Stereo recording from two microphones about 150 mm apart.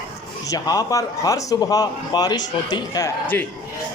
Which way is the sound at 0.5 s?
25° left (ahead or behind).